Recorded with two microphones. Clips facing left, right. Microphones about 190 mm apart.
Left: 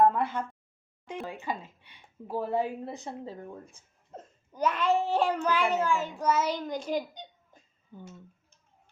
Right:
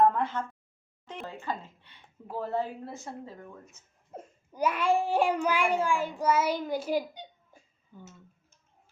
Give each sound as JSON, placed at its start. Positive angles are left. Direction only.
{"t": 0.0, "sound": "a sound", "side_deg": 10}
{"t": 1.0, "sound": "speech", "side_deg": 10}
{"t": 3.2, "sound": "speech", "side_deg": 30}
{"t": 4.1, "sound": "a child's voice", "side_deg": -10}
{"t": 7.9, "sound": "speech", "side_deg": 20}